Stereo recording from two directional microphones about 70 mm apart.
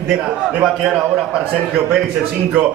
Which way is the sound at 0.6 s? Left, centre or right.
Centre.